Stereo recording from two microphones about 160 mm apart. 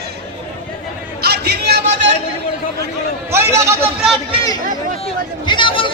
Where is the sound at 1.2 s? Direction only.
90° right.